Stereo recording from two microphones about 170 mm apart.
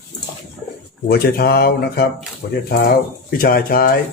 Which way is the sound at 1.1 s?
65° left (ahead or behind).